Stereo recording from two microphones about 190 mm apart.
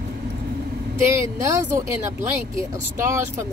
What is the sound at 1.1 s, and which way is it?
Speech, 15° right (ahead or behind).